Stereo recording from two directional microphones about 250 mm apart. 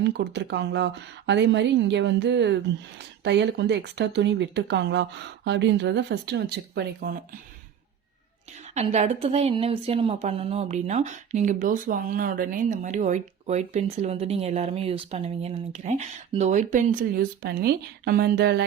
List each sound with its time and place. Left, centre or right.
0.0 s speech: right
8.7 s a woman's voice: right